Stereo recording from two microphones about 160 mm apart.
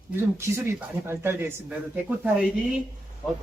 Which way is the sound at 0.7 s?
15° right (ahead or behind).